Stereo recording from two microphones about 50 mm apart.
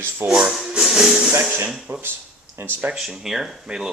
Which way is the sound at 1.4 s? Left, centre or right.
Right.